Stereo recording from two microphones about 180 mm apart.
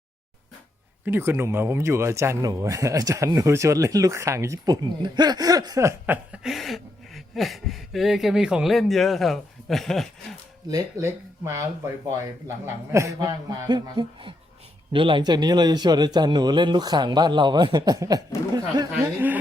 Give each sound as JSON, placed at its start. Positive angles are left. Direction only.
{"t": 1.0, "sound": "speech", "side_deg": -10}
{"t": 10.7, "sound": "speech", "side_deg": -15}
{"t": 12.6, "sound": "a man's voice", "side_deg": -15}